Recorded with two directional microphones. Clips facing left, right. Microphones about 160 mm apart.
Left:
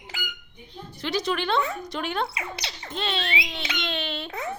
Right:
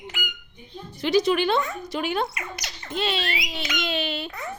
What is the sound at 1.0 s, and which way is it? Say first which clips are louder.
A woman's voice: right 6 dB; 10° right (ahead or behind).